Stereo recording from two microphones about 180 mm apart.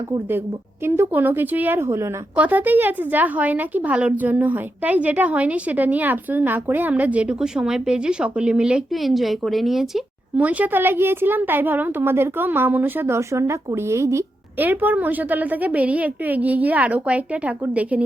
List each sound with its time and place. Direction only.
0.1 s a woman's voice: 10° right (ahead or behind)